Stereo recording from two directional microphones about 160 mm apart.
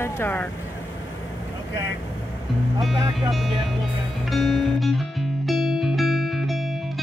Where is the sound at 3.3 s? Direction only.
Centre (ahead or behind).